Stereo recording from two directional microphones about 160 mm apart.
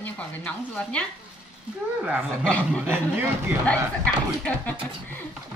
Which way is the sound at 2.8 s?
10° right (ahead or behind).